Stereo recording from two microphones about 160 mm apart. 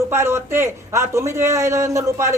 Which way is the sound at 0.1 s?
15° right (ahead or behind).